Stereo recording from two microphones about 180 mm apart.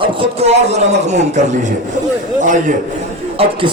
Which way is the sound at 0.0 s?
30° right (ahead or behind).